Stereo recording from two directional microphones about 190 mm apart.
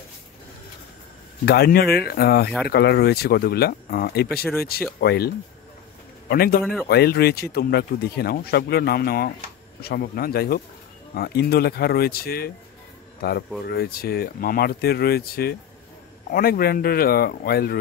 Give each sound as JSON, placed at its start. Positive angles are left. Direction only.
{"t": 1.4, "sound": "a man's voice", "side_deg": 55}
{"t": 6.6, "sound": "speech", "side_deg": 0}
{"t": 6.9, "sound": "speech", "side_deg": 55}
{"t": 13.7, "sound": "a man's voice", "side_deg": 55}